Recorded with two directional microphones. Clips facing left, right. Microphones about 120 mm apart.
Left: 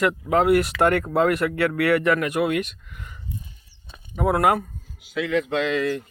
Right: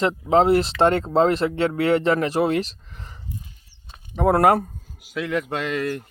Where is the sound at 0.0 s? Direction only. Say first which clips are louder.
Right 2 dB; 25° right (ahead or behind).